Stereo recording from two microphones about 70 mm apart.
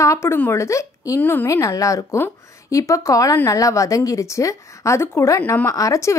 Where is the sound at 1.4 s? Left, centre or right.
Left.